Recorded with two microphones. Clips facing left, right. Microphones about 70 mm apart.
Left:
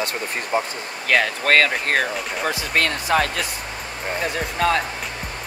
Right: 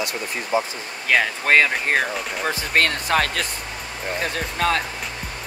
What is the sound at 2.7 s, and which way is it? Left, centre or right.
Speech, right.